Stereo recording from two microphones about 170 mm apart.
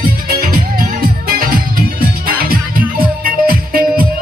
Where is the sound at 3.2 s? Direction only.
60° right (ahead or behind).